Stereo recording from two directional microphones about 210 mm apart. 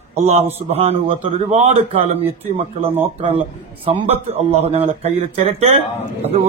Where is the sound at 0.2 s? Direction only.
30° right (ahead or behind).